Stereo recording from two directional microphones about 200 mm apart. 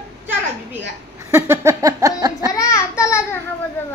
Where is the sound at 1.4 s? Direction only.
15° right (ahead or behind).